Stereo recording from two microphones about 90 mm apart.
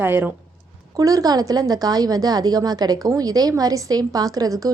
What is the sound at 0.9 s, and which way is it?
A woman's voice, 40° right (ahead or behind).